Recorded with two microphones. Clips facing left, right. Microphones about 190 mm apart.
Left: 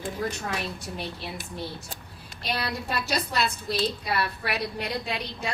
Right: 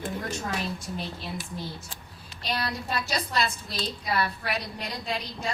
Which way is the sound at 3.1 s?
60° left (ahead or behind).